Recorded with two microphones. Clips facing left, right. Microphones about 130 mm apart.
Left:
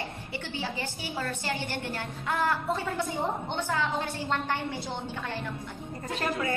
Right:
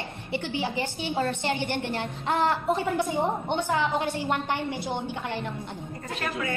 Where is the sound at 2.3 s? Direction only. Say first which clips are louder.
Right 4 dB; 20° right (ahead or behind).